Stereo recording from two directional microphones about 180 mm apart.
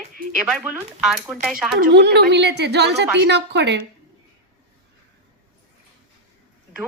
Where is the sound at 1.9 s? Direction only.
70° right (ahead or behind).